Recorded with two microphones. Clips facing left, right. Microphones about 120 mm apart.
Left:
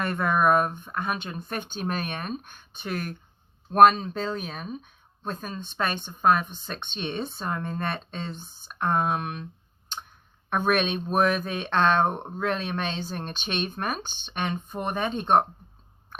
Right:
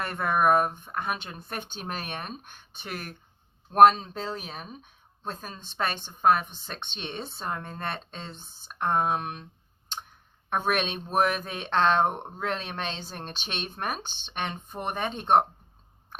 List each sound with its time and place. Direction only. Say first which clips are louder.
0.0 s speech: left 1 dB; 25° right (ahead or behind)
10.5 s speech: left 3 dB; 25° right (ahead or behind)